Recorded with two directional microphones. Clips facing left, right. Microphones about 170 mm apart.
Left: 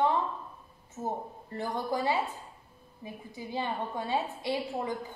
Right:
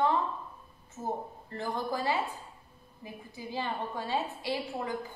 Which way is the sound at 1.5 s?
15° left (ahead or behind).